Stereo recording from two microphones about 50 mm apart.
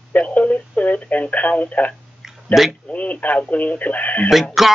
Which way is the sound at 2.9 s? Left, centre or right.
Left.